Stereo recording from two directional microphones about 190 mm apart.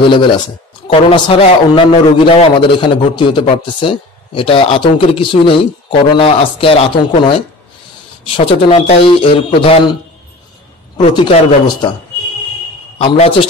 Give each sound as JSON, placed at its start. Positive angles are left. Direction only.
{"t": 0.0, "sound": "a man's voice", "side_deg": 25}
{"t": 11.1, "sound": "a man's voice", "side_deg": 25}
{"t": 13.0, "sound": "a man's voice", "side_deg": 30}